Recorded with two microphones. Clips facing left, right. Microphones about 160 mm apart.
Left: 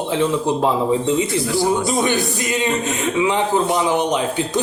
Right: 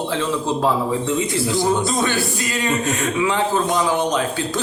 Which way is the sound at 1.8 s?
15° left (ahead or behind).